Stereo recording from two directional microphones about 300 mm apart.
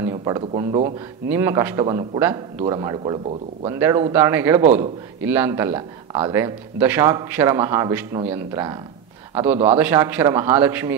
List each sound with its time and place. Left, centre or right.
0.0 s a man's voice: centre